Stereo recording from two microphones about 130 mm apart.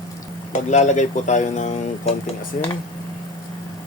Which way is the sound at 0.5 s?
65° left (ahead or behind).